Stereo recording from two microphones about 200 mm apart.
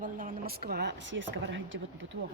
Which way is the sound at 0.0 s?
45° right (ahead or behind).